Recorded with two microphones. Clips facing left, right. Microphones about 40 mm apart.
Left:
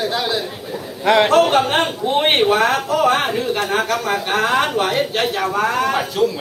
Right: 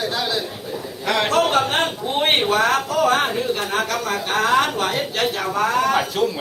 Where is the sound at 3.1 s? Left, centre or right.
Centre.